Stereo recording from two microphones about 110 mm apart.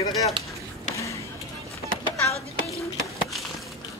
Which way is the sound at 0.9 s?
30° left (ahead or behind).